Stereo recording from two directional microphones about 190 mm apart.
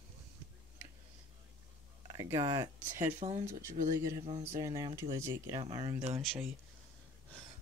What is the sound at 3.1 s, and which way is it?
Speech, 35° right (ahead or behind).